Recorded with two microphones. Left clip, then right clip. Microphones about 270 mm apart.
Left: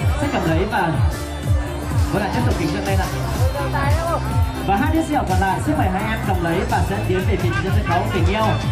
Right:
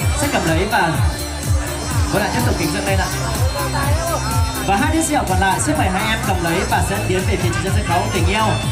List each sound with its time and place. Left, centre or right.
0.2 s speech: centre
2.1 s speech: centre
4.6 s speech: centre